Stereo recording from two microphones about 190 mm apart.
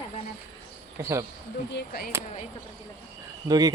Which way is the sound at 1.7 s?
55° left (ahead or behind).